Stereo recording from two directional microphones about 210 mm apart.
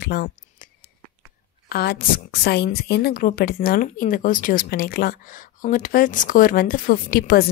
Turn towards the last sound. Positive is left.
turn(degrees=45)  # may be behind; listen again after turning